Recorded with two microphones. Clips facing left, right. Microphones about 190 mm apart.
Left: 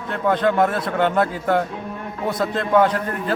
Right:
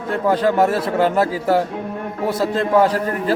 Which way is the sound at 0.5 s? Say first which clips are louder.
Right 3 dB; 5° right (ahead or behind).